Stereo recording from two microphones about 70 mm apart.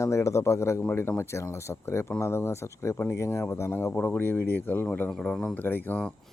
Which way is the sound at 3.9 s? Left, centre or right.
Left.